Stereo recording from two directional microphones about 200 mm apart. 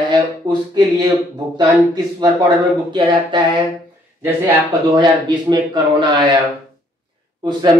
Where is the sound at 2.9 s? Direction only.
25° right (ahead or behind).